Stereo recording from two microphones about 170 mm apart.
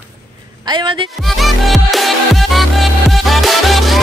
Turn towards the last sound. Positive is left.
turn(degrees=0)  # may be behind; listen again after turning